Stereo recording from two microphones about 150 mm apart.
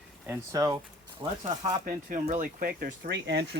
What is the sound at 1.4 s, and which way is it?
Speech, 60° right (ahead or behind).